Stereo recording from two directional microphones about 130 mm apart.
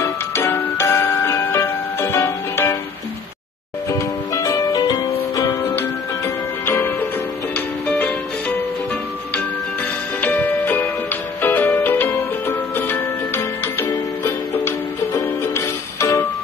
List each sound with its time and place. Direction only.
0.0 s music: 15° left (ahead or behind)
3.9 s music: 25° left (ahead or behind)
10.2 s music: 15° left (ahead or behind)
15.1 s music: 20° left (ahead or behind)